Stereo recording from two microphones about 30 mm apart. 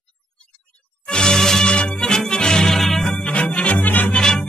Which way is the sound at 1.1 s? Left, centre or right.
Left.